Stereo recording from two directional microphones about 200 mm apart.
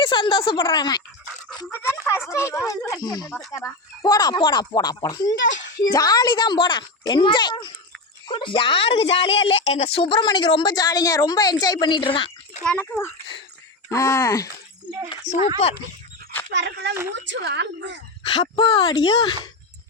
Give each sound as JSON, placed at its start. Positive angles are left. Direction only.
{"t": 0.0, "sound": "a woman's voice", "side_deg": 25}
{"t": 2.0, "sound": "a woman's voice", "side_deg": 15}
{"t": 5.4, "sound": "speech", "side_deg": 65}
{"t": 5.9, "sound": "a woman's voice", "side_deg": 20}
{"t": 12.6, "sound": "speech", "side_deg": 5}
{"t": 15.3, "sound": "speech", "side_deg": 35}
{"t": 16.5, "sound": "a woman's voice", "side_deg": -60}
{"t": 18.2, "sound": "a woman's voice", "side_deg": 25}